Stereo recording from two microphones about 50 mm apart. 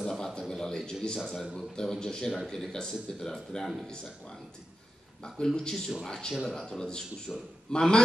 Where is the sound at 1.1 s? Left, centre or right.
Centre.